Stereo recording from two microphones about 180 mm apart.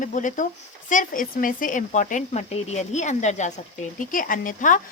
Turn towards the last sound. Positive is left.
turn(degrees=45)  # may be behind; listen again after turning